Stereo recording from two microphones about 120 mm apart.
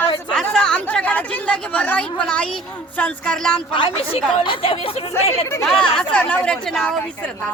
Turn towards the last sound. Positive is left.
turn(degrees=10)  # may be behind; listen again after turning